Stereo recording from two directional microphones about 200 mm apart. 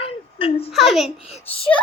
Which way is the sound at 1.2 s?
30° left (ahead or behind).